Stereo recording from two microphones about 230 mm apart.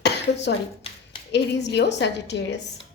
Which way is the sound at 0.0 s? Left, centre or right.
Left.